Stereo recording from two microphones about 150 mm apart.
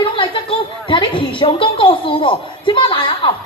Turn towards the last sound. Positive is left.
turn(degrees=35)  # may be behind; listen again after turning